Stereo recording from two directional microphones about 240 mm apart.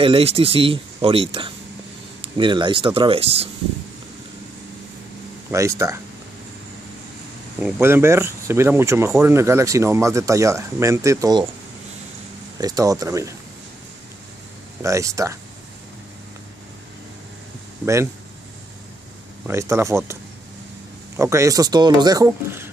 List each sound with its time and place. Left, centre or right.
0.0 s speech: right
5.5 s speech: centre
7.6 s speech: centre
12.5 s speech: centre
14.8 s speech: centre
19.4 s speech: centre
21.2 s speech: centre